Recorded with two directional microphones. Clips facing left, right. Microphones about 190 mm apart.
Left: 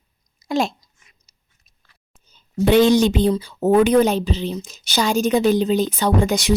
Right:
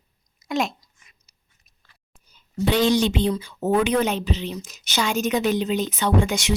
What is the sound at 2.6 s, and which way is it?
A woman's voice, 50° left (ahead or behind).